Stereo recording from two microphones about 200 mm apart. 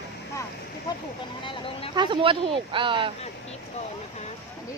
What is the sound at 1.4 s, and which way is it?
Speech, 25° left (ahead or behind).